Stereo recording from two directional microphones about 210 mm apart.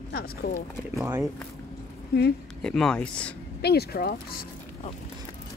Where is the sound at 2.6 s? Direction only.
5° left (ahead or behind).